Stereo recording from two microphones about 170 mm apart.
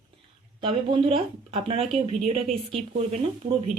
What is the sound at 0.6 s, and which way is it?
Speech, 30° right (ahead or behind).